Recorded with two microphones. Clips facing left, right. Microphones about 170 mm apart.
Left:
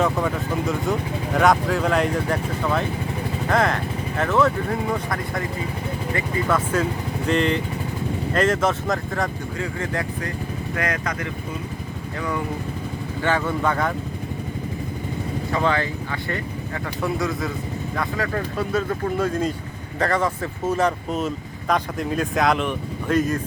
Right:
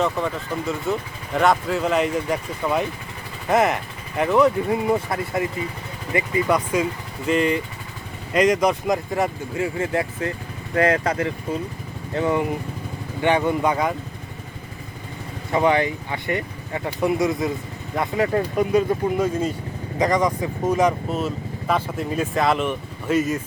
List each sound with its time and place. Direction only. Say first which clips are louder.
0.0 s speech: left 1 dB; centre (ahead or behind)
4.2 s speech: right 3 dB; 15° right (ahead or behind)
15.5 s speech: right 4 dB; 20° right (ahead or behind)
21.1 s speech: even; centre (ahead or behind)